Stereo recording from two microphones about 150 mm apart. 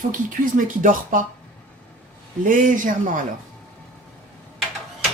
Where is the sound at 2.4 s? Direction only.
60° right (ahead or behind).